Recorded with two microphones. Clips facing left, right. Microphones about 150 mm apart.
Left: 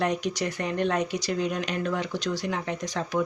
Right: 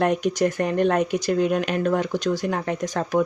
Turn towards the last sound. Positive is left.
turn(degrees=-50)  # may be behind; listen again after turning